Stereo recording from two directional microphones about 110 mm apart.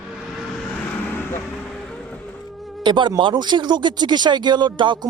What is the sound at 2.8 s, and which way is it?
Speech, 45° right (ahead or behind).